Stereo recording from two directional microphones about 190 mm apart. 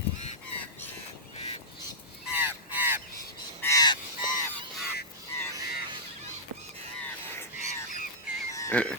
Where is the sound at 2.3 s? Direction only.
10° right (ahead or behind).